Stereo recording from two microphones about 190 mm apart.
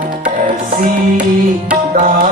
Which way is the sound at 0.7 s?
50° right (ahead or behind).